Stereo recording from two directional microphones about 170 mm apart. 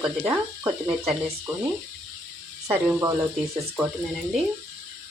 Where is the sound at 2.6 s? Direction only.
20° right (ahead or behind).